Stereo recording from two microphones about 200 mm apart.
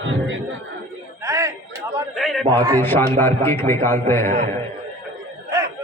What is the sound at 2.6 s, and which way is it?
Speech, 15° right (ahead or behind).